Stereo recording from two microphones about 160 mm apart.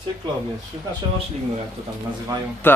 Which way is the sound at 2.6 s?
15° left (ahead or behind).